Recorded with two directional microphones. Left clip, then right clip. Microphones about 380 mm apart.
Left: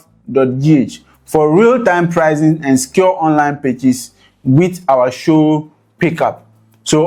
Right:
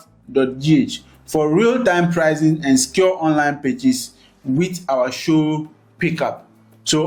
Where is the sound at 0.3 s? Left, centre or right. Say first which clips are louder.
Left 5 dB; left.